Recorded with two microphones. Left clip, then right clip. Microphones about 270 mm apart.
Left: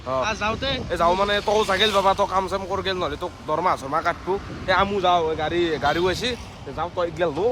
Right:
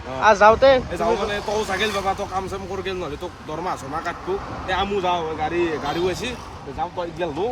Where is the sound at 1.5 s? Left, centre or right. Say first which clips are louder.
Left 4 dB; centre.